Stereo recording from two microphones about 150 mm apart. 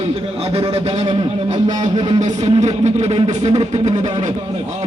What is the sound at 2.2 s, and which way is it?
A man's voice, 50° right (ahead or behind).